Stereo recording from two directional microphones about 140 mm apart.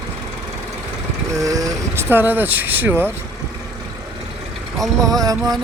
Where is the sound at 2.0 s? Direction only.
15° right (ahead or behind).